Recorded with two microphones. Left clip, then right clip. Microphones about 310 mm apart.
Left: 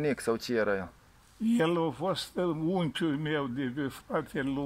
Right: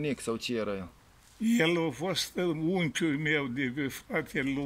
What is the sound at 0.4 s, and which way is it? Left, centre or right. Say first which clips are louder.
Speech: left 4 dB; centre.